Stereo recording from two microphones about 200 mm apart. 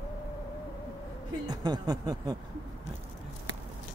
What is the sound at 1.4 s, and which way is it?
Music, 20° right (ahead or behind).